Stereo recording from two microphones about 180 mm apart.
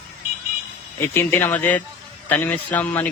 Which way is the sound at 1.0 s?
15° left (ahead or behind).